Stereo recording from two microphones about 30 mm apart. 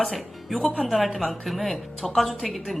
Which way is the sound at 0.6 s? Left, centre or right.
Centre.